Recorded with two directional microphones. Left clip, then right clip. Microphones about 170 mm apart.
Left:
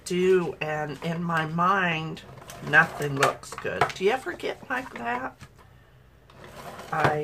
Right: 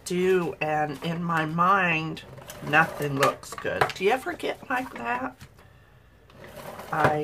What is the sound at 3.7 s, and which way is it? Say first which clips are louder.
Speech: even; 10° right (ahead or behind).